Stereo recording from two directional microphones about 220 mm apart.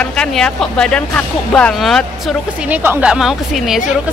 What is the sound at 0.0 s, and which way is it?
Speech, 5° left (ahead or behind).